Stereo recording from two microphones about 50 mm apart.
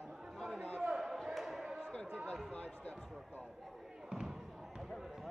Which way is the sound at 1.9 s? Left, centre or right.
Centre.